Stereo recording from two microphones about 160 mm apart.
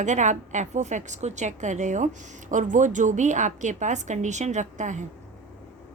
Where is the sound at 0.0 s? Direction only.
50° right (ahead or behind).